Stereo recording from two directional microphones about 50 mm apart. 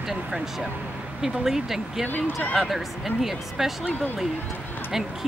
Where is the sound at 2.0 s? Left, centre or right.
Left.